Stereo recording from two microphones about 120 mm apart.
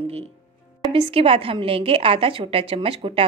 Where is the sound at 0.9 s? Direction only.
50° right (ahead or behind).